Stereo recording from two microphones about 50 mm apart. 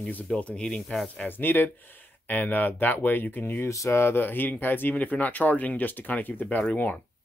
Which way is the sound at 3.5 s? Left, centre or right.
Left.